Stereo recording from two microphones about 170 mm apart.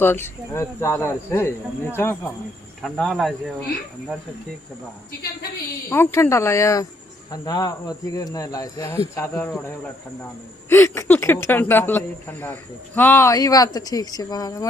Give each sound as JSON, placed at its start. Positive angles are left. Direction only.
{"t": 0.0, "sound": "speech", "side_deg": 15}
{"t": 2.8, "sound": "speech", "side_deg": 0}
{"t": 5.9, "sound": "speech", "side_deg": 15}
{"t": 10.7, "sound": "speech", "side_deg": 15}